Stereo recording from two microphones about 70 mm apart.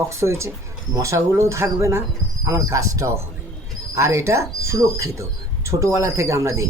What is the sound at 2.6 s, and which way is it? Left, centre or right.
Speech, right.